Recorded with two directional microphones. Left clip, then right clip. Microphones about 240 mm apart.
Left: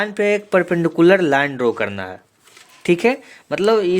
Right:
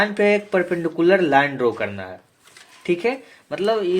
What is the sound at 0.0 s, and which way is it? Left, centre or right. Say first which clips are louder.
Speech: even; left.